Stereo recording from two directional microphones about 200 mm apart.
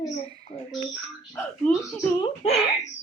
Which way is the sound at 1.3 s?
5° left (ahead or behind).